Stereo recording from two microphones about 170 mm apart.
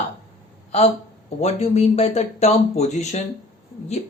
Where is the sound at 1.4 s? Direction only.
40° left (ahead or behind).